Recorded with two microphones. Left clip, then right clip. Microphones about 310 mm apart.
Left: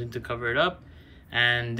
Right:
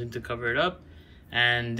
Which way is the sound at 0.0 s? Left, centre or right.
Centre.